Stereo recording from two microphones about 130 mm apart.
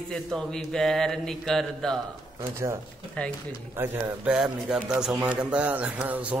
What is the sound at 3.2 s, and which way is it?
Speech, 10° left (ahead or behind).